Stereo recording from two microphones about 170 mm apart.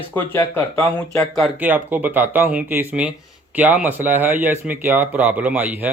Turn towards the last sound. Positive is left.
turn(degrees=-10)  # may be behind; listen again after turning